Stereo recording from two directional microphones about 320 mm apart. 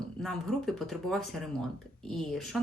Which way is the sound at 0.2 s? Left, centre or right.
Centre.